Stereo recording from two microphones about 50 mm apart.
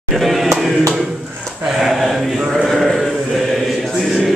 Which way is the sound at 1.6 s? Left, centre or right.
Centre.